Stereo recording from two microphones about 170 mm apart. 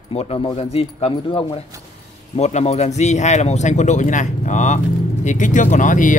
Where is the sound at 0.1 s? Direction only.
35° left (ahead or behind).